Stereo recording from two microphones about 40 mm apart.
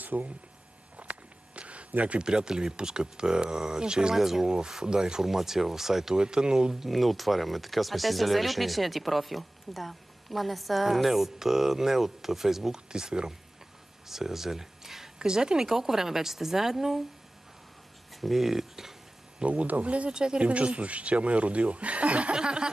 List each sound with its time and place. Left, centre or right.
0.0 s speech: right
0.9 s a sound: right
2.2 s speech: centre
4.2 s speech: centre
6.1 s speech: right
6.9 s speech: centre
14.0 s a sound: centre
15.2 s speech: centre
18.1 s speech: centre
19.4 s speech: right
20.1 s speech: right
20.4 s speech: right
22.4 s speech: right